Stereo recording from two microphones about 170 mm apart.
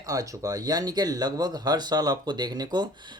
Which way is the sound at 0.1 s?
20° right (ahead or behind).